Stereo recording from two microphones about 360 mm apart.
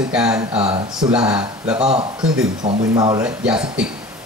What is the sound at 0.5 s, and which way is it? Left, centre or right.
Speech, centre.